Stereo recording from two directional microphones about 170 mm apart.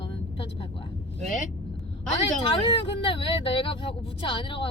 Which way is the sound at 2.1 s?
30° left (ahead or behind).